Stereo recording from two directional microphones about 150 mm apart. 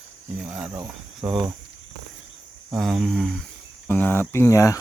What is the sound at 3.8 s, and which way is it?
Speech, 10° left (ahead or behind).